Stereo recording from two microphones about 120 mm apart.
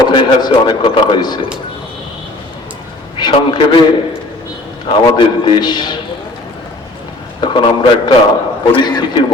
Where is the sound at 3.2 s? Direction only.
40° left (ahead or behind).